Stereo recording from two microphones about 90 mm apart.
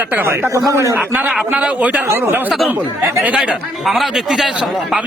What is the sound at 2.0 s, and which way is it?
Speech, 25° right (ahead or behind).